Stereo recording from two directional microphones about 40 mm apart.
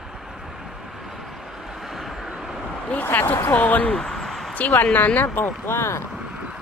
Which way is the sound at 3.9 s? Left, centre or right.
Centre.